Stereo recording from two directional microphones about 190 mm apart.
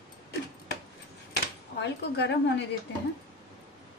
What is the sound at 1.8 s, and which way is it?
Speech, 65° left (ahead or behind).